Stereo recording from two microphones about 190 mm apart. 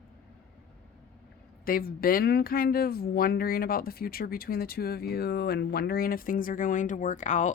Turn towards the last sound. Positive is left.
turn(degrees=40)  # may be behind; listen again after turning